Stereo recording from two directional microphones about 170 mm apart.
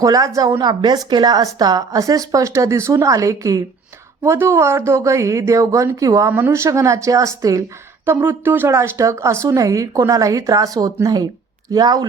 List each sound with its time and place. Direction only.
0.0 s a woman's voice: 20° right (ahead or behind)